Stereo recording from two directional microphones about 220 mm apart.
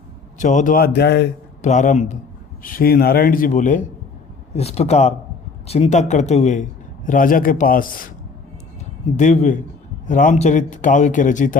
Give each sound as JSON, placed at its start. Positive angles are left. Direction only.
{"t": 0.3, "sound": "a man's voice", "side_deg": 35}
{"t": 1.6, "sound": "a man's voice", "side_deg": 35}
{"t": 9.1, "sound": "a man's voice", "side_deg": 30}